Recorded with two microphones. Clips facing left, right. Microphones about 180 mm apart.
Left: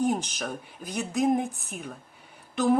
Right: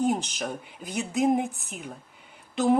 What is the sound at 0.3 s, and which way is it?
A woman's voice, 20° right (ahead or behind).